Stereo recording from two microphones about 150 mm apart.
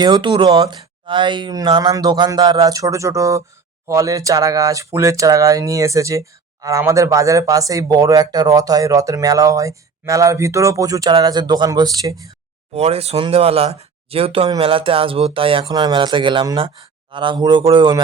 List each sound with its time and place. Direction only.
0.0 s speech: 30° right (ahead or behind)
12.7 s speech: 45° right (ahead or behind); by 18.0 s 30° right (ahead or behind)